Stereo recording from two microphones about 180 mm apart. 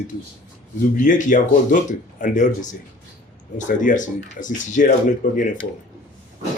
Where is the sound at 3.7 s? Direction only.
45° left (ahead or behind).